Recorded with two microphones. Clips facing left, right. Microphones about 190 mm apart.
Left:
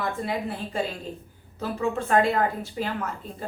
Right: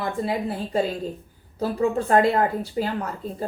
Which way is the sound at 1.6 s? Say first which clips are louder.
Right 5 dB; 35° right (ahead or behind).